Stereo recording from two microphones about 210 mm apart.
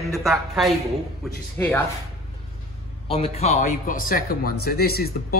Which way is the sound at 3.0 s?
25° left (ahead or behind).